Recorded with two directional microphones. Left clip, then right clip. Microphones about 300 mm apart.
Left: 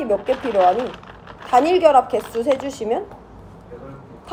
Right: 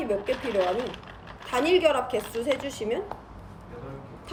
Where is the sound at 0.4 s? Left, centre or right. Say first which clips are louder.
Left 12 dB; left.